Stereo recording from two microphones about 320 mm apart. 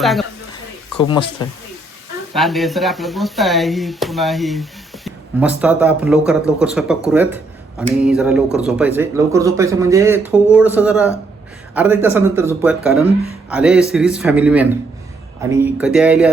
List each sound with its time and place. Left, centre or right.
0.0 s a woman's voice: centre
0.9 s speech: centre
2.3 s speech: centre
7.1 s a sound: centre
8.0 s speech: centre